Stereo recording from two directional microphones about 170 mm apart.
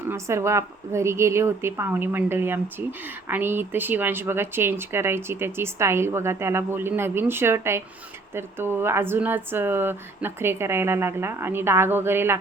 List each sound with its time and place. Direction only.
0.1 s speech: 15° right (ahead or behind)